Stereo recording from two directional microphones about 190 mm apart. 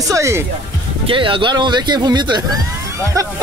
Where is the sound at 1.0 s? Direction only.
25° right (ahead or behind).